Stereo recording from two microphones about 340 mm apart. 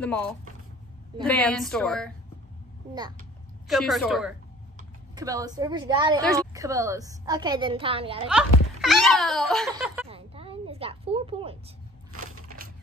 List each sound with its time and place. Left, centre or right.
0.0 s a woman's voice: centre
3.6 s a woman's voice: centre
8.3 s a child's voice: centre
10.0 s a sound: centre
12.1 s crushing: right